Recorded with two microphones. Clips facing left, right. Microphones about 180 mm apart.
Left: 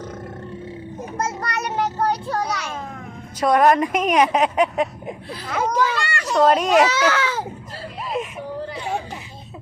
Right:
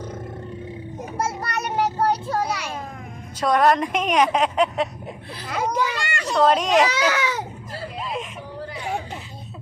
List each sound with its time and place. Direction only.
1.4 s child singing: 10° right (ahead or behind)
3.4 s a woman's voice: 10° left (ahead or behind)
5.5 s speech: 15° right (ahead or behind)
6.3 s a woman's voice: 5° left (ahead or behind)
6.8 s speech: 15° right (ahead or behind)